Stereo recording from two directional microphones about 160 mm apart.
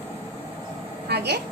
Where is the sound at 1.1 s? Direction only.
90° right.